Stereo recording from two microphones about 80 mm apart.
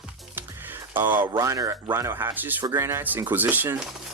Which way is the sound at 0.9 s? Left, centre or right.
Right.